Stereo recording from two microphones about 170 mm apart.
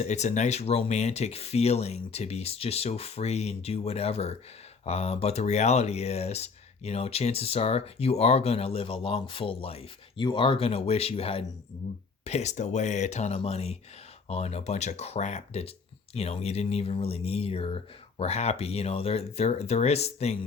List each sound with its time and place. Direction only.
0.0 s speech: 45° left (ahead or behind)